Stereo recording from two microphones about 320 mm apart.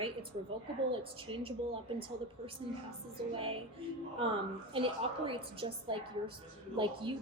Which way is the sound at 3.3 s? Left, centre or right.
Centre.